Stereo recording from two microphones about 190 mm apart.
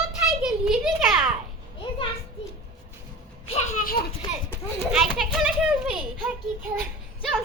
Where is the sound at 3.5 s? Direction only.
45° left (ahead or behind).